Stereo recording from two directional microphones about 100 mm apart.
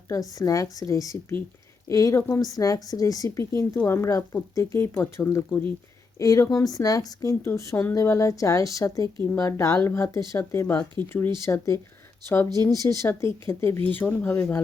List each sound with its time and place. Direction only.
0.1 s a woman's voice: 35° left (ahead or behind)
6.1 s a woman's voice: 35° left (ahead or behind)
12.8 s speech: 30° left (ahead or behind)
13.8 s speech: 15° left (ahead or behind)